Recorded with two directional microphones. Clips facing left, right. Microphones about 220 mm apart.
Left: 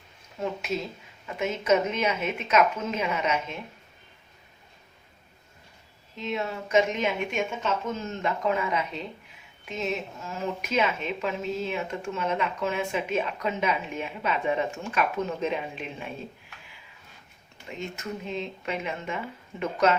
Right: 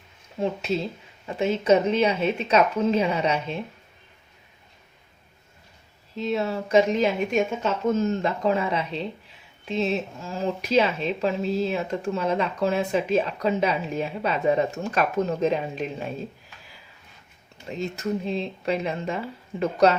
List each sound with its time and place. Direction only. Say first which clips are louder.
0.3 s speech: right 4 dB; 30° right (ahead or behind)
6.1 s speech: right 5 dB; 35° right (ahead or behind)
17.7 s speech: right 7 dB; 35° right (ahead or behind)